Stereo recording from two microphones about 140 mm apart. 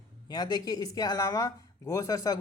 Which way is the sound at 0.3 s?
30° left (ahead or behind).